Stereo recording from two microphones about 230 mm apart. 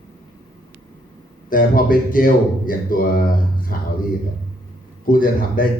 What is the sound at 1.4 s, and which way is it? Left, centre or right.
A man's voice, left.